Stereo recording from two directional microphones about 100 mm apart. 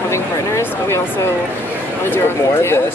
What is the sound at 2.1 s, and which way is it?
Speech, 25° left (ahead or behind).